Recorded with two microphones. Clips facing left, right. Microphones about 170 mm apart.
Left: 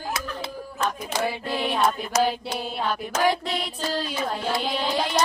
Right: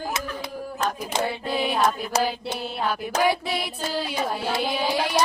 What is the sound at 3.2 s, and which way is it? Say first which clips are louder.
Music: even; 5° right (ahead or behind).